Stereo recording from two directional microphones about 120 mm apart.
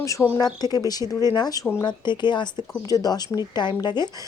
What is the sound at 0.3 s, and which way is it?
Speech, 35° left (ahead or behind).